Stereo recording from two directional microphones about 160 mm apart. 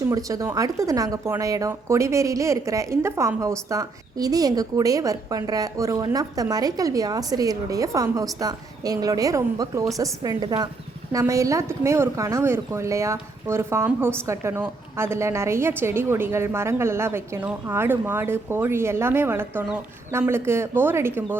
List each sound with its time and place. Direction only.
0.1 s speech: 20° right (ahead or behind)